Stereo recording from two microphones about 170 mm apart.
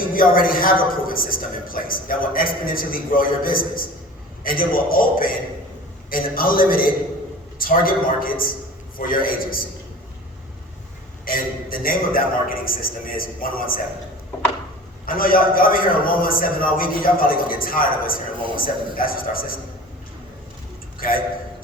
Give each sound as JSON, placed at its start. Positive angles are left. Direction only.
{"t": 0.1, "sound": "a man's voice", "side_deg": 55}
{"t": 11.3, "sound": "a man's voice", "side_deg": 55}
{"t": 15.0, "sound": "a man's voice", "side_deg": 55}
{"t": 21.0, "sound": "a man's voice", "side_deg": 55}